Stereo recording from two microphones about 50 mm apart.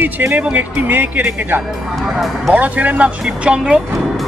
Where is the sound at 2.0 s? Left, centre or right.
Centre.